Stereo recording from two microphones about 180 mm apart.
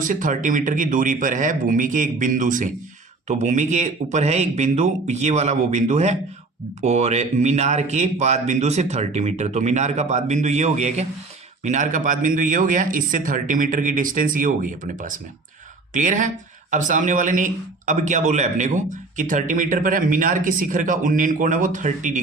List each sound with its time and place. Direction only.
0.0 s speech: 45° right (ahead or behind)